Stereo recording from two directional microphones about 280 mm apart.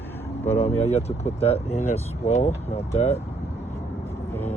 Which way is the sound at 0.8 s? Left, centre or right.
Left.